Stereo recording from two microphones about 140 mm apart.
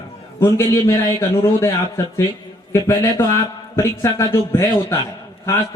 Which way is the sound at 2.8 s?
20° left (ahead or behind).